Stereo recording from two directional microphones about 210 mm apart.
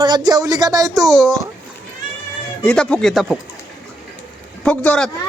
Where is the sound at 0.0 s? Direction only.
20° right (ahead or behind).